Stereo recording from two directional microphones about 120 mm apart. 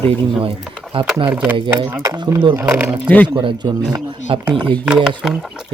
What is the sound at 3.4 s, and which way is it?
Speech, 40° right (ahead or behind).